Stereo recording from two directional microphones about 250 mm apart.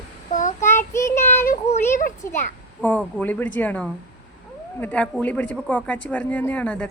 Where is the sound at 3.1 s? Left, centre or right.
Centre.